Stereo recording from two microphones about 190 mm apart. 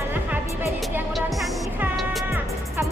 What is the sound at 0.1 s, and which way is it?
Music, 10° right (ahead or behind).